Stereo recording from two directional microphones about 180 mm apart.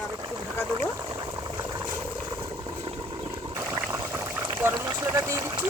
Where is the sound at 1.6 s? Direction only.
15° right (ahead or behind).